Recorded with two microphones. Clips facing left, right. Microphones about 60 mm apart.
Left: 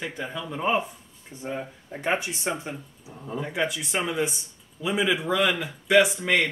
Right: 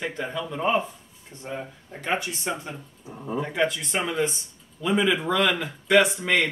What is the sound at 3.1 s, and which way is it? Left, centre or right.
Speech, centre.